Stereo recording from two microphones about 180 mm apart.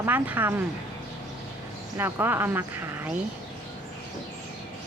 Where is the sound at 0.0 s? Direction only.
10° right (ahead or behind).